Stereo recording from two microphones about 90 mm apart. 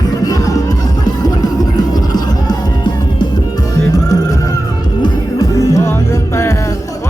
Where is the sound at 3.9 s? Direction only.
40° left (ahead or behind).